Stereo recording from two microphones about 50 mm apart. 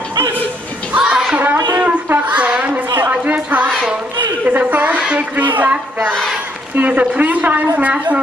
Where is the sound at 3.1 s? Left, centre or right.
Right.